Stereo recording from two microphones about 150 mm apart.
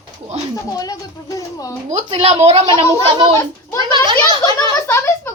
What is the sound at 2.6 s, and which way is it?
Speech, 30° right (ahead or behind).